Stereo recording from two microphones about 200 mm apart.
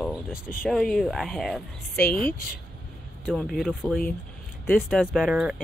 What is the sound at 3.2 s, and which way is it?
A woman's voice, centre (ahead or behind).